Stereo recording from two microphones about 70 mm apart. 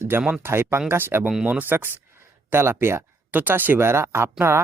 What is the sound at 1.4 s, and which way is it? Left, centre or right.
Speech, right.